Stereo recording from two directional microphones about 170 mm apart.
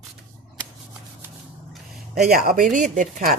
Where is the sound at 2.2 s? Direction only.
60° right (ahead or behind).